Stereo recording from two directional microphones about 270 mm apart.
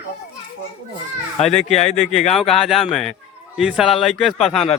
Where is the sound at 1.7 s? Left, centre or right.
Left.